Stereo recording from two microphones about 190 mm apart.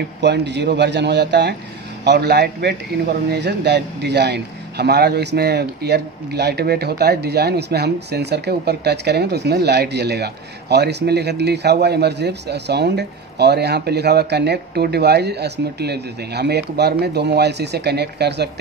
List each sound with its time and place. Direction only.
0.2 s a man's voice: 65° right (ahead or behind)